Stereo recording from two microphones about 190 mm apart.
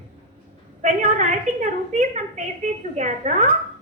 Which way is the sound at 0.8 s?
40° right (ahead or behind).